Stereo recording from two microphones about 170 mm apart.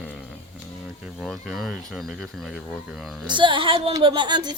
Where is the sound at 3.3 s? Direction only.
30° right (ahead or behind).